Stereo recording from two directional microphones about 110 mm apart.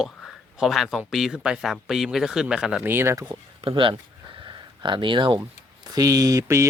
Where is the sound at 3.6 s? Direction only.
50° right (ahead or behind).